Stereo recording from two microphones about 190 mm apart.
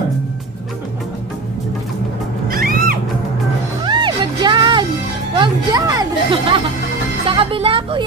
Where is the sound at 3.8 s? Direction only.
25° right (ahead or behind).